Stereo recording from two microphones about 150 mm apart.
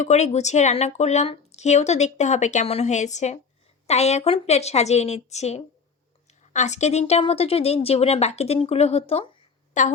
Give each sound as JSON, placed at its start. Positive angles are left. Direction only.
{"t": 0.0, "sound": "speech", "side_deg": 50}
{"t": 9.7, "sound": "a woman's voice", "side_deg": 55}